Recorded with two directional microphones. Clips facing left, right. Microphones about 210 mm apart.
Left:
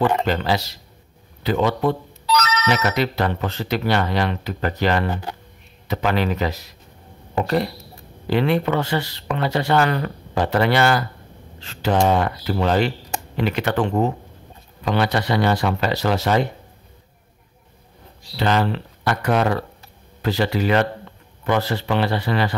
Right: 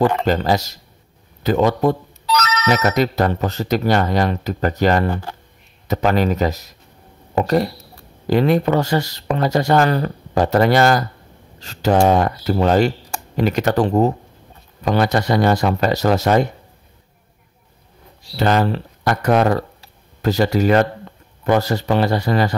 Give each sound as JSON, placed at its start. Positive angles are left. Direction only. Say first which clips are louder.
{"t": 0.2, "sound": "speech", "louder": "right 3 dB", "side_deg": -45}
{"t": 18.3, "sound": "speech", "louder": "right 3 dB", "side_deg": -45}